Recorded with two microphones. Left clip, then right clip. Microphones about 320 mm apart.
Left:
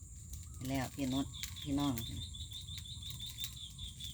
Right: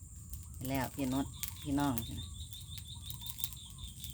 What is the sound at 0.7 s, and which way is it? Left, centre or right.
Speech, centre.